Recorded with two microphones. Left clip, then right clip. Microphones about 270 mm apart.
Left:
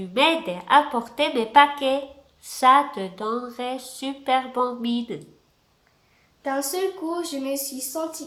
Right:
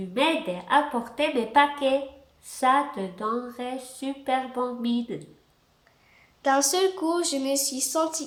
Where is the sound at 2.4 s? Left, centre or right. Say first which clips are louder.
Left 5 dB; centre.